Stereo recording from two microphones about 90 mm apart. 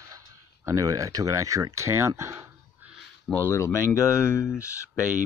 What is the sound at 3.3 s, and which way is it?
Speech, 25° left (ahead or behind).